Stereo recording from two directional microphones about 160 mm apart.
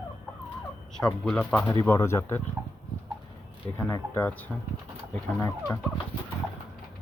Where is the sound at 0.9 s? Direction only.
5° left (ahead or behind).